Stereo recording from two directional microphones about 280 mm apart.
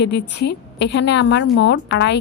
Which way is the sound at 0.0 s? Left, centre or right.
Left.